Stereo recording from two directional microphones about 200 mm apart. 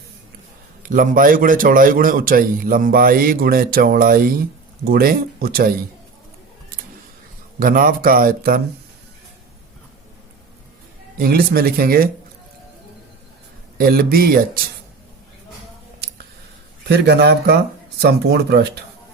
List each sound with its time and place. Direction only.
0.8 s a man's voice: 40° right (ahead or behind)
7.6 s a man's voice: 45° right (ahead or behind)
11.2 s a man's voice: 50° right (ahead or behind)
13.7 s a man's voice: 45° right (ahead or behind)
16.9 s a man's voice: 55° right (ahead or behind)